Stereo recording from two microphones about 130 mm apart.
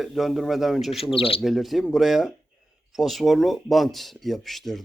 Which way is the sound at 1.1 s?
45° left (ahead or behind).